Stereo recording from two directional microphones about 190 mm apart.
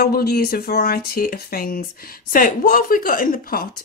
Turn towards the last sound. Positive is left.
turn(degrees=50)  # may be behind; listen again after turning